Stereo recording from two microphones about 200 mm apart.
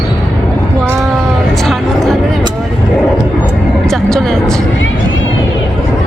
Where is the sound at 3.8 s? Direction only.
Centre (ahead or behind).